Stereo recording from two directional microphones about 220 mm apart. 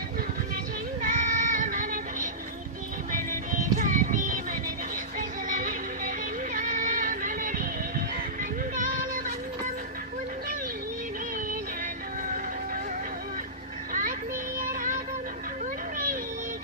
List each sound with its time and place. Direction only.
1.0 s child singing: 35° right (ahead or behind)
3.1 s music: 35° right (ahead or behind)
5.5 s music: 35° right (ahead or behind)
14.6 s music: 35° right (ahead or behind)